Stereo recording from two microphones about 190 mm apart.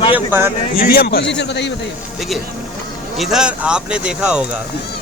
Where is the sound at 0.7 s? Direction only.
55° left (ahead or behind).